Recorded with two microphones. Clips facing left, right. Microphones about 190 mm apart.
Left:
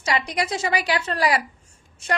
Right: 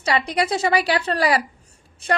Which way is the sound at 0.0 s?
30° right (ahead or behind).